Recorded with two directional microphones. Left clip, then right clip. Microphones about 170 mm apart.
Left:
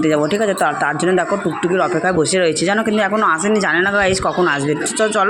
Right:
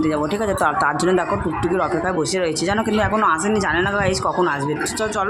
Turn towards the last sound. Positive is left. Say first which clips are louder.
# left 3 dB
turn(degrees=20)  # may be behind; listen again after turning